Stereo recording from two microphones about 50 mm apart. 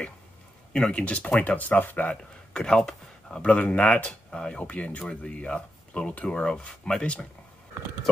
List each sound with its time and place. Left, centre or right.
0.7 s speech: centre
1.0 s speech: left
2.5 s speech: centre
3.4 s speech: left